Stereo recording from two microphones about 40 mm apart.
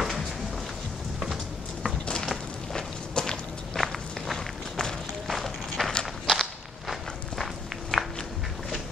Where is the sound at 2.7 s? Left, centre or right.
Centre.